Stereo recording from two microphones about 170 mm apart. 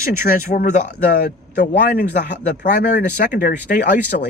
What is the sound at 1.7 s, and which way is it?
Speech, 65° left (ahead or behind).